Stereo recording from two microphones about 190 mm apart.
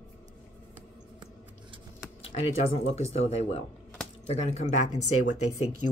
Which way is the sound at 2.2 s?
30° left (ahead or behind).